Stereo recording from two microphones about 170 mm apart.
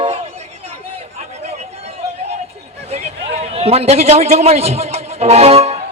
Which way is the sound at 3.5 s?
35° right (ahead or behind).